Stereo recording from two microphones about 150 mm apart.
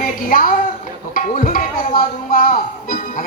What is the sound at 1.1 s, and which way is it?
Music, 60° left (ahead or behind).